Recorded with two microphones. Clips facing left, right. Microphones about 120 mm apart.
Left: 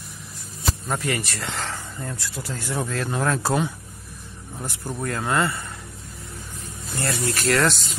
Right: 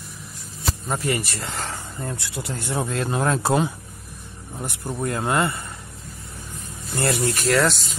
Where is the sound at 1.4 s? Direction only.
10° right (ahead or behind).